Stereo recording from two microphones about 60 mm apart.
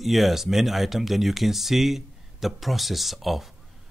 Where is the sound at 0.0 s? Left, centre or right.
Centre.